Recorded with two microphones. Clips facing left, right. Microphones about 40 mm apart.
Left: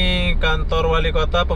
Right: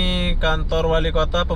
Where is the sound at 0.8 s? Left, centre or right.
Centre.